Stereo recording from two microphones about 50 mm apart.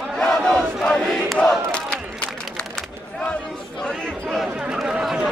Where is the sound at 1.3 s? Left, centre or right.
Left.